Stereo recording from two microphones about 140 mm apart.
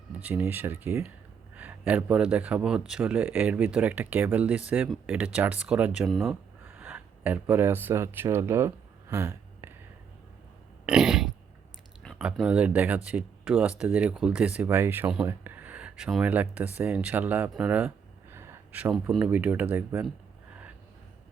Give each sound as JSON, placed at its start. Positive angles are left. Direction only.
{"t": 0.1, "sound": "speech", "side_deg": -10}
{"t": 6.7, "sound": "a sound", "side_deg": -15}
{"t": 10.8, "sound": "burping", "side_deg": -5}
{"t": 12.2, "sound": "speech", "side_deg": -10}
{"t": 17.5, "sound": "a sound", "side_deg": -10}
{"t": 19.3, "sound": "speech", "side_deg": -10}